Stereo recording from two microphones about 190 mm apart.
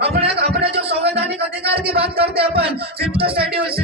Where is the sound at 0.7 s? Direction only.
60° right (ahead or behind).